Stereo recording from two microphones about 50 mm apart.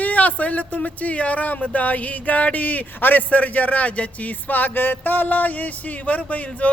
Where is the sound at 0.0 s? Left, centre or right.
Left.